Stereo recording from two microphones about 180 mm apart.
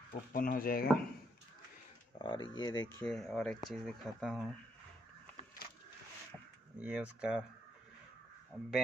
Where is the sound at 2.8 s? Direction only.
5° left (ahead or behind).